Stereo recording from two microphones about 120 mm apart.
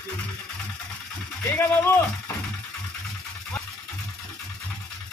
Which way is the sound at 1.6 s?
20° left (ahead or behind).